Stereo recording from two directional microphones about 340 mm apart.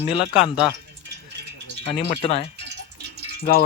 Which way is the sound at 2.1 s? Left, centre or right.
Centre.